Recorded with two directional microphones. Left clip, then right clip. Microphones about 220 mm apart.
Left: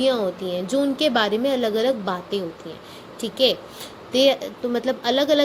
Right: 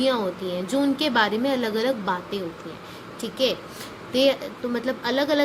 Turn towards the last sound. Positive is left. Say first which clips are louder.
# left 4 dB
turn(degrees=15)  # may be behind; listen again after turning